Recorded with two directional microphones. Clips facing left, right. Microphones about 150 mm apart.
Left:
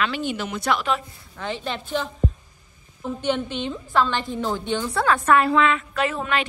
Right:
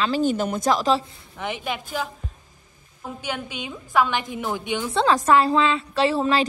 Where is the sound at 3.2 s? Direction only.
10° right (ahead or behind).